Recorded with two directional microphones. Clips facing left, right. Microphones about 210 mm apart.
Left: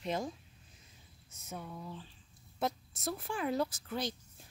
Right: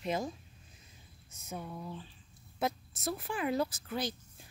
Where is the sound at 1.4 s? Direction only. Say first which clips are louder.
Right 2 dB; 15° right (ahead or behind).